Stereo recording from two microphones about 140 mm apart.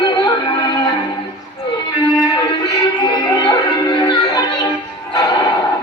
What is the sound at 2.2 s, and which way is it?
Music, 30° left (ahead or behind).